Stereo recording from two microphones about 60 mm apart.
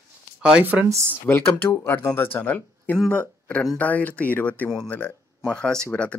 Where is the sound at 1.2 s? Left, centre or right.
Left.